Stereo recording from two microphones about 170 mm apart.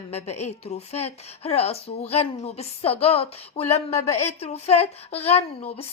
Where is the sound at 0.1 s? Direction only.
40° left (ahead or behind).